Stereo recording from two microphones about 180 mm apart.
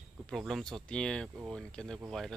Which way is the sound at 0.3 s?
Centre (ahead or behind).